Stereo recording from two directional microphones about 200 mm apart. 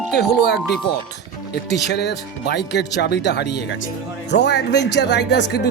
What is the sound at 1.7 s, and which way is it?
Speech, 55° left (ahead or behind).